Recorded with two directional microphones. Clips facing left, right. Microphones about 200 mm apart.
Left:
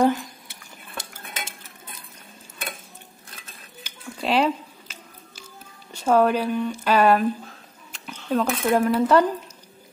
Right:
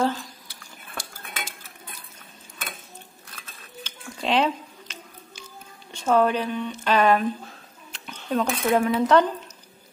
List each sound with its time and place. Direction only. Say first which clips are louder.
0.0 s cutlery: left 5 dB; 20° left (ahead or behind)
3.8 s a sound: left 1 dB; 5° left (ahead or behind)
5.9 s speech: left 2 dB; 10° left (ahead or behind)